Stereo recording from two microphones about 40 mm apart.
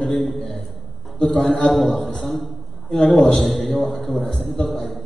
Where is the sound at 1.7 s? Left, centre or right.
Centre.